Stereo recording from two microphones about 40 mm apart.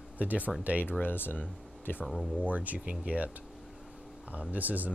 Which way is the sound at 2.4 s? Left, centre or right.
Right.